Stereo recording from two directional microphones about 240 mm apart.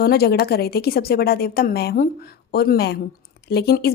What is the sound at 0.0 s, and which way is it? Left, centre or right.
Speech, left.